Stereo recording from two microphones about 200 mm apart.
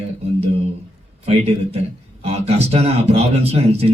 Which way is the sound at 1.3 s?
30° right (ahead or behind).